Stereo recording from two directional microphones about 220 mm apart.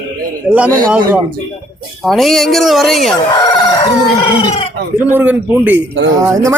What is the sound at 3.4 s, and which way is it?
Crowing, 20° left (ahead or behind).